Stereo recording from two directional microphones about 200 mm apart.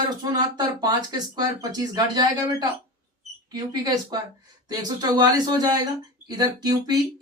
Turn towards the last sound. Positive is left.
turn(degrees=-20)  # may be behind; listen again after turning